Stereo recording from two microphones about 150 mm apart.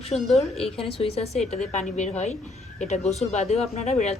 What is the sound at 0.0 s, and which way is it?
Speech, 45° left (ahead or behind).